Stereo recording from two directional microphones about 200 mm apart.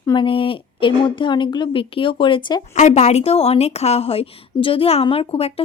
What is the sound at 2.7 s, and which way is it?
A woman's voice, 35° left (ahead or behind).